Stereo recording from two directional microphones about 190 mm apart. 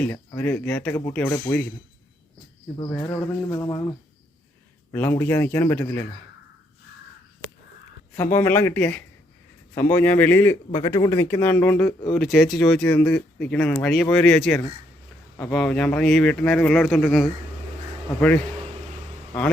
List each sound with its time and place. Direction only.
0.3 s speech: 10° left (ahead or behind)
2.7 s speech: 20° left (ahead or behind)
8.1 s speech: 15° left (ahead or behind)
10.7 s speech: 25° left (ahead or behind); by 17.2 s centre (ahead or behind)